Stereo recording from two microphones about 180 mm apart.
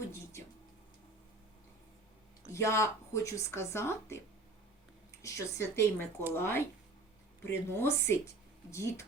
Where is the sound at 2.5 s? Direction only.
15° left (ahead or behind).